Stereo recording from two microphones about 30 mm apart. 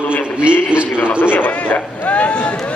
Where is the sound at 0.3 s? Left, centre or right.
Right.